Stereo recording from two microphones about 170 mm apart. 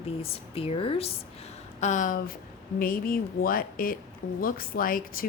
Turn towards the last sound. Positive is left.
turn(degrees=55)  # may be behind; listen again after turning